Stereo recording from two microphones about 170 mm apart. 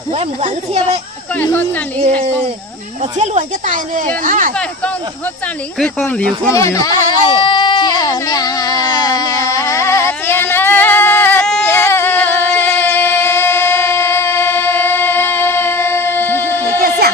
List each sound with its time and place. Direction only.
0.1 s a child's voice: 40° right (ahead or behind)
1.4 s speech: 10° left (ahead or behind)
3.0 s speech: 45° right (ahead or behind)
5.8 s speech: 5° left (ahead or behind)
6.5 s a sound: 20° left (ahead or behind)